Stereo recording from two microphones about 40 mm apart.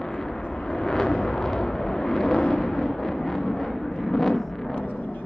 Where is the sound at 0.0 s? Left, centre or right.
Centre.